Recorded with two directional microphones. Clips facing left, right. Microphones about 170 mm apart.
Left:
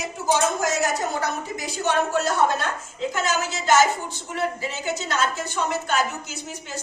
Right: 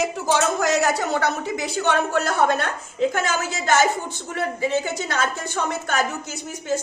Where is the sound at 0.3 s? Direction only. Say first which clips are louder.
Right 4 dB; 70° right (ahead or behind).